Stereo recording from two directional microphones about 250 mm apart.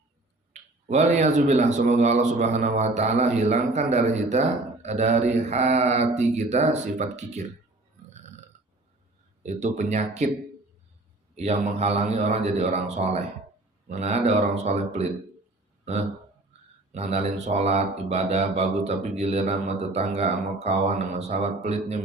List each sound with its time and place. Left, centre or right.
0.5 s speech: right
9.4 s speech: right
11.3 s speech: right
15.8 s speech: right